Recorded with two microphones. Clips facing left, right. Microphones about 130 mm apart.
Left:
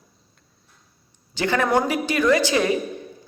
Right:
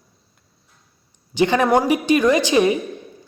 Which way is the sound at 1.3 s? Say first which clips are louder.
Right 4 dB; 15° right (ahead or behind).